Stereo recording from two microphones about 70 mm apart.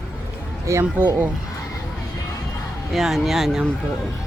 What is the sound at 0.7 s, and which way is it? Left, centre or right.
Speech, right.